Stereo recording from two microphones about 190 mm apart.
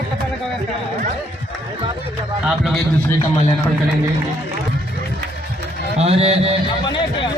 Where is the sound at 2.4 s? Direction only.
Centre (ahead or behind).